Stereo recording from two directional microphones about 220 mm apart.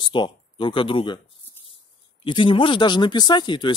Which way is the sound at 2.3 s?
20° left (ahead or behind).